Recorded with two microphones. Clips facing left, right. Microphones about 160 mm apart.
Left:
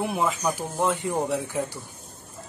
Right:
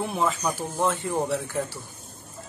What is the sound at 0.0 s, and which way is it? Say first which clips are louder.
Speech: left 1 dB; 10° left (ahead or behind).